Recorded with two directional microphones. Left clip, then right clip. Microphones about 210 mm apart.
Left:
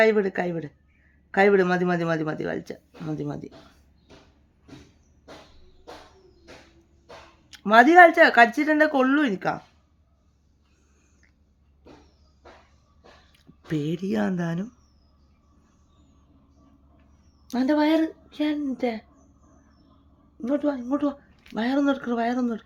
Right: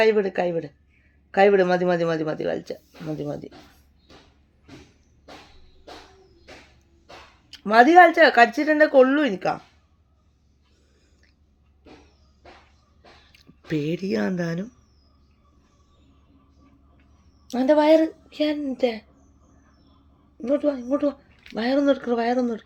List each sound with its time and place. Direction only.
0.0 s speech: 25° left (ahead or behind)
7.5 s speech: 25° left (ahead or behind)
13.3 s speech: 15° left (ahead or behind)
17.5 s speech: 25° left (ahead or behind)
20.4 s speech: 25° left (ahead or behind)